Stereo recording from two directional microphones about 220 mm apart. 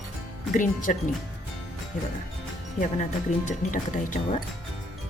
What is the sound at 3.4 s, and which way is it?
Speech, 35° left (ahead or behind).